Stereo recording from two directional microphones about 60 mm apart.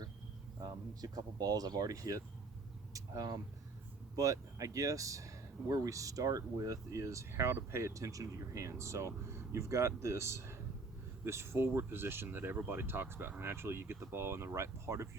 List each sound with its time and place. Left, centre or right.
1.0 s speech: right
2.9 s speech: right
4.1 s speech: right